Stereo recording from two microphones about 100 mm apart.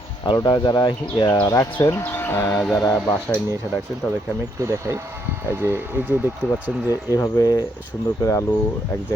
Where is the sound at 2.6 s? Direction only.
5° left (ahead or behind).